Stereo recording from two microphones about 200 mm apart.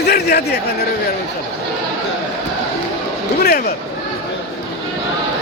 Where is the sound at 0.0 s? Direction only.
55° left (ahead or behind).